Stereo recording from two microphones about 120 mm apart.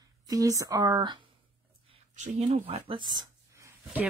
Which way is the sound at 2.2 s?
85° right.